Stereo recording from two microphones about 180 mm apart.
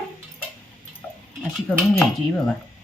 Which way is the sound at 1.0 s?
5° left (ahead or behind).